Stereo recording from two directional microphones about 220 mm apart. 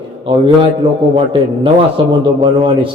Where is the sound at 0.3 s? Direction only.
25° right (ahead or behind).